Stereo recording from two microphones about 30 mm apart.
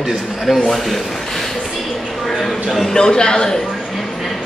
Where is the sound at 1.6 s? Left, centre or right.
Centre.